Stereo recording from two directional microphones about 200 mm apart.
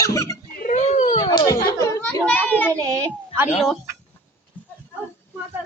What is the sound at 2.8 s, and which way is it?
Speech, 15° right (ahead or behind).